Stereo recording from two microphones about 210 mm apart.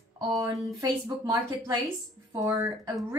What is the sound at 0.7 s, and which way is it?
A woman's voice, 15° right (ahead or behind).